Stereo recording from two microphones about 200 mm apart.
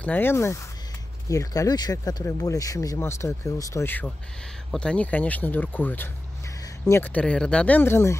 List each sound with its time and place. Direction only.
0.0 s speech: 10° left (ahead or behind)